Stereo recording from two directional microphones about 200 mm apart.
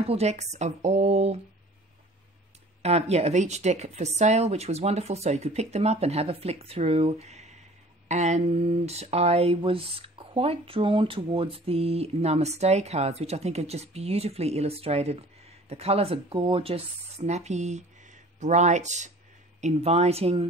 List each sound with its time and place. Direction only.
0.0 s speech: 30° right (ahead or behind)
2.8 s speech: 30° right (ahead or behind)